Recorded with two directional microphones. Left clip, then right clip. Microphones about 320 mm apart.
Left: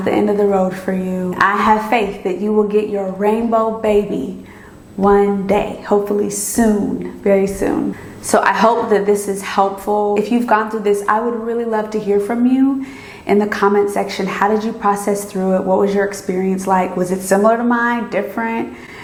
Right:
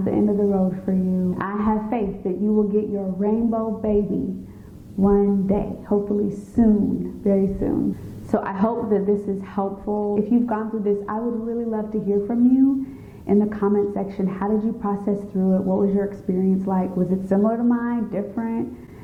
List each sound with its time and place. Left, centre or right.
0.0 s speech: centre
9.6 s speech: centre
10.2 s speech: centre